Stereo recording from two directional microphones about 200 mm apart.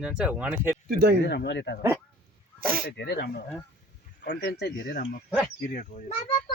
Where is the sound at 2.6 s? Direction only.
45° right (ahead or behind).